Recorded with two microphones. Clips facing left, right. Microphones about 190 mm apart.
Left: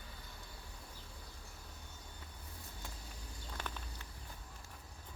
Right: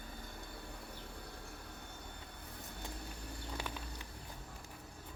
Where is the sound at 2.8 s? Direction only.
65° right (ahead or behind).